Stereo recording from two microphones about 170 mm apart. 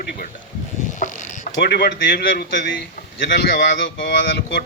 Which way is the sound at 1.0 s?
50° left (ahead or behind).